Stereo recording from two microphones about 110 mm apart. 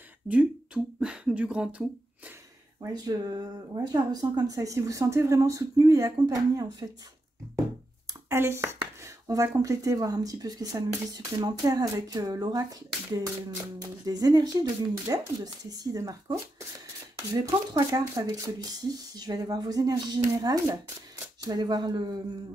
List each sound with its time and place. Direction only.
0.3 s speech: 10° right (ahead or behind)
2.9 s speech: 35° right (ahead or behind)
8.1 s speech: 25° right (ahead or behind)
13.8 s speech: 35° right (ahead or behind)